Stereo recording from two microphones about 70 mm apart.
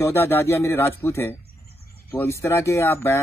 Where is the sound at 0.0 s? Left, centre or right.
Left.